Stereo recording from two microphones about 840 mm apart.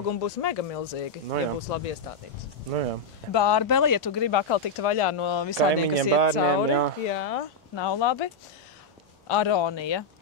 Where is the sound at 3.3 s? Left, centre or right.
Left.